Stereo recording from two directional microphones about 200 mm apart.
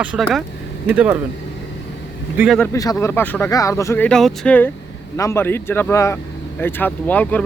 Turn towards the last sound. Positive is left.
turn(degrees=10)  # may be behind; listen again after turning